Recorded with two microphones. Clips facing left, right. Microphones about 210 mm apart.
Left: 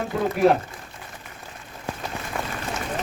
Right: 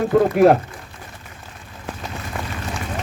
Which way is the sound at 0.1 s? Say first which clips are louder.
Right 6 dB; 55° right (ahead or behind).